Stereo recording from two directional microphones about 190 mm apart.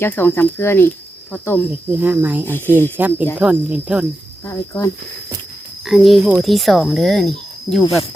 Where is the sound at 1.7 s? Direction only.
10° right (ahead or behind).